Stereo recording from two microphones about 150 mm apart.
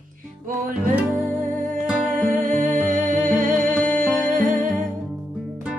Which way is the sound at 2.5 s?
55° right (ahead or behind).